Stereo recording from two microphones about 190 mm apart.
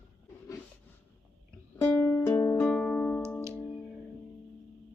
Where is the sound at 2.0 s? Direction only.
15° left (ahead or behind).